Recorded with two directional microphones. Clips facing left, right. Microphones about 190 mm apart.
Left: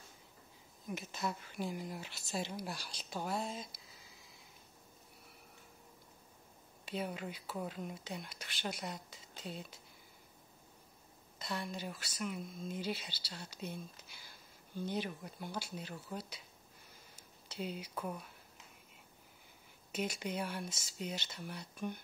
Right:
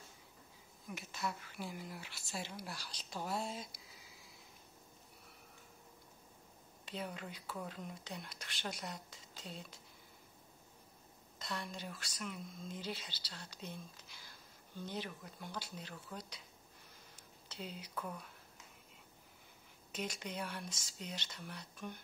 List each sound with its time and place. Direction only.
0.9 s speech: 20° left (ahead or behind); by 3.8 s 5° right (ahead or behind)
6.9 s speech: 10° left (ahead or behind)
11.3 s speech: 5° left (ahead or behind)
14.9 s speech: 15° left (ahead or behind)
17.5 s speech: 10° left (ahead or behind)
19.9 s speech: 10° left (ahead or behind)